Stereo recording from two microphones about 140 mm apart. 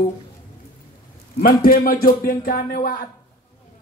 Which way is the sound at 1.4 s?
90° left.